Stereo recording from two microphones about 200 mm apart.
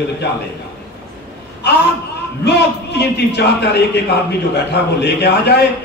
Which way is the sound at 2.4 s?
55° left (ahead or behind).